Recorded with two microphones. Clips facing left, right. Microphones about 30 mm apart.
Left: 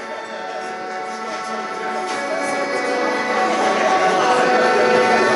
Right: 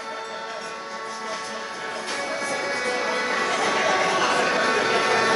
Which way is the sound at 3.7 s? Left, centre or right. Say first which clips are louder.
Left 4 dB; centre.